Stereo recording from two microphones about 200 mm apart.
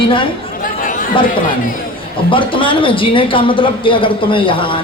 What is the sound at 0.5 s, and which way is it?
Chatter, 45° left (ahead or behind).